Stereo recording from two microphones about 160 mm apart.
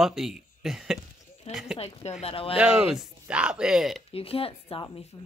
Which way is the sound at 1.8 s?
40° left (ahead or behind).